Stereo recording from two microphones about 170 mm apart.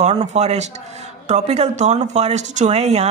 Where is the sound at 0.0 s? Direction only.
40° right (ahead or behind).